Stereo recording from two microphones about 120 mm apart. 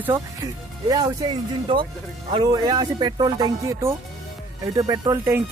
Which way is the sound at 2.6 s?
40° right (ahead or behind).